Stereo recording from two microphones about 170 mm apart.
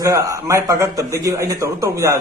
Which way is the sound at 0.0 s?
20° right (ahead or behind).